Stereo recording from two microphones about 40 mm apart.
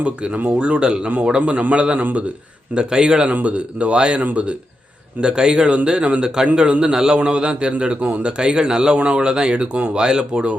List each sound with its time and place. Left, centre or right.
0.0 s a man's voice: right
0.3 s speech: right
0.6 s a man's voice: right
1.4 s a man's voice: right
3.2 s speech: right
5.2 s a man's voice: right
6.9 s a man's voice: centre
9.7 s speech: right
10.0 s a man's voice: right